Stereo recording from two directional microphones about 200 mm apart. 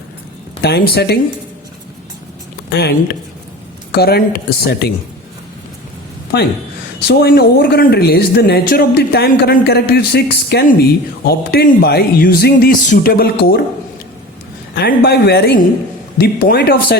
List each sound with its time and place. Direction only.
0.6 s speech: 55° left (ahead or behind)
2.6 s speech: 50° left (ahead or behind)
3.9 s speech: 50° left (ahead or behind)
6.3 s speech: 50° left (ahead or behind)
14.8 s speech: 50° left (ahead or behind)